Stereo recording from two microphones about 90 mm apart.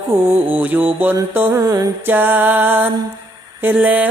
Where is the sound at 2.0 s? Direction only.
20° right (ahead or behind).